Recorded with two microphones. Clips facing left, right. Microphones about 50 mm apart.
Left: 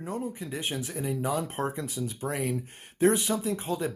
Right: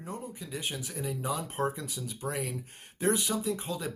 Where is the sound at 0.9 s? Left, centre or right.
Centre.